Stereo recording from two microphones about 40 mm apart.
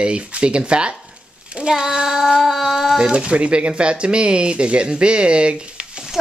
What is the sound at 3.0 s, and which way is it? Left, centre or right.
Speech, right.